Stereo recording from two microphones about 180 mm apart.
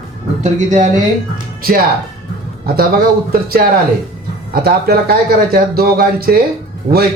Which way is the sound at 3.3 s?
60° right (ahead or behind).